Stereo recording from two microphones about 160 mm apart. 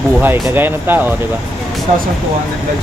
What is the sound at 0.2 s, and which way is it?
Speech, 10° right (ahead or behind).